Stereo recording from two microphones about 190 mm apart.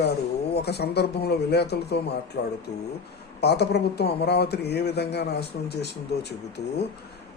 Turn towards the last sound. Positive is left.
turn(degrees=35)  # may be behind; listen again after turning